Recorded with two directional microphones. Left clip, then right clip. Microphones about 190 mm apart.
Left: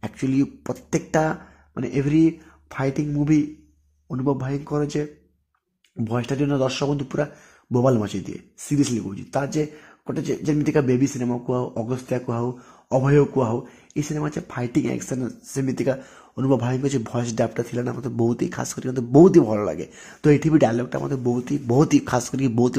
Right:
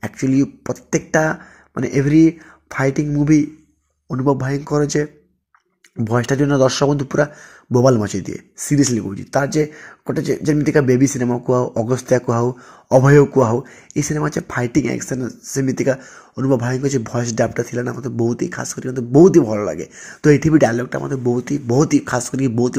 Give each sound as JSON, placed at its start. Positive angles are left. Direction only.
{"t": 0.0, "sound": "speech", "side_deg": -10}